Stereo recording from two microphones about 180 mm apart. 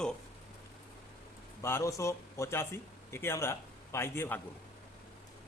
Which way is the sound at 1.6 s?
15° left (ahead or behind).